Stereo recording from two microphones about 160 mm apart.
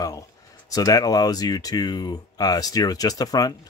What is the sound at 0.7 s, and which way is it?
Speech, 20° left (ahead or behind).